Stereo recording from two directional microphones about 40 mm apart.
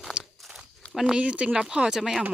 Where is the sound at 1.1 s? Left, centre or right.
Right.